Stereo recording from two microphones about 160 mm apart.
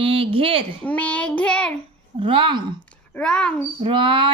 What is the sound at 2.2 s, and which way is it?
Speech, 30° right (ahead or behind).